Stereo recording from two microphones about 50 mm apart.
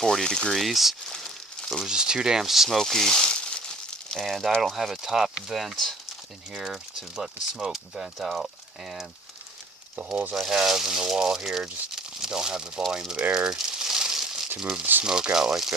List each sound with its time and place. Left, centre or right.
0.0 s speech: centre
0.5 s speech: centre
1.0 s a sound: centre
1.8 s speech: centre
2.7 s crumpling: centre
4.6 s speech: centre
6.5 s speech: centre
10.5 s speech: centre
13.3 s crumpling: centre
14.6 s speech: centre